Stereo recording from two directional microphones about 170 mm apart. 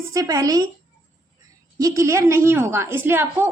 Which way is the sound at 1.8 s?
20° right (ahead or behind).